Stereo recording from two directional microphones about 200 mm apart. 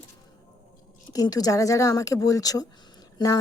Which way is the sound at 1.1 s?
20° left (ahead or behind).